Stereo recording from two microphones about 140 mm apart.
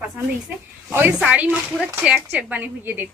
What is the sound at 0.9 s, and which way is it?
A woman's voice, 10° right (ahead or behind).